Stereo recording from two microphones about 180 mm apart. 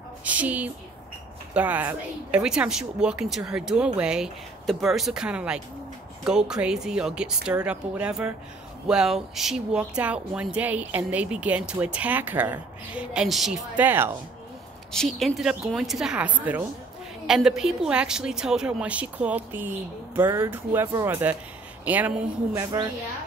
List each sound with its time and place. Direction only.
0.2 s speech: 10° right (ahead or behind)
15.1 s speech: centre (ahead or behind)
22.6 s a woman's voice: 25° right (ahead or behind)